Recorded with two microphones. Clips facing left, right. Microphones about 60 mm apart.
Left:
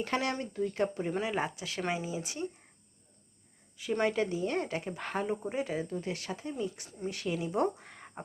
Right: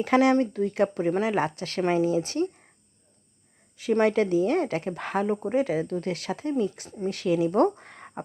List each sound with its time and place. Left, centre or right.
0.1 s speech: right
1.2 s speech: right
4.0 s speech: right
5.4 s speech: right
7.3 s speech: right